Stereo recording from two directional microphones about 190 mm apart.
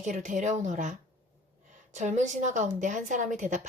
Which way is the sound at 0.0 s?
40° right (ahead or behind).